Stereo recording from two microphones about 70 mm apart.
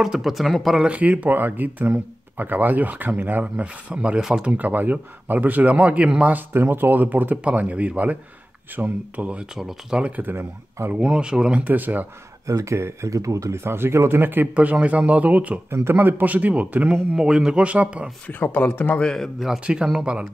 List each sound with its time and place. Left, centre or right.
0.0 s speech: centre
0.8 s speech: centre
9.6 s speech: centre
10.1 s speech: right
11.0 s speech: centre
12.4 s speech: right
15.7 s speech: right; by 18.1 s centre
18.2 s speech: left
18.9 s speech: centre
19.6 s speech: centre